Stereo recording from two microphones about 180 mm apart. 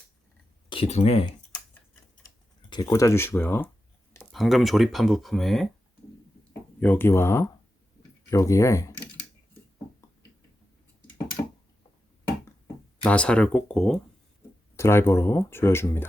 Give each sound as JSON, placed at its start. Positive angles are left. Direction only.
{"t": 0.7, "sound": "speech", "side_deg": 35}
{"t": 2.6, "sound": "speech", "side_deg": 25}
{"t": 4.2, "sound": "speech", "side_deg": 0}
{"t": 6.7, "sound": "speech", "side_deg": 10}
{"t": 13.1, "sound": "speech", "side_deg": 5}
{"t": 14.8, "sound": "speech", "side_deg": 15}